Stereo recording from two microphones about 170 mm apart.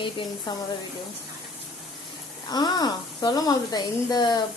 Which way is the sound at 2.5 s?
25° left (ahead or behind).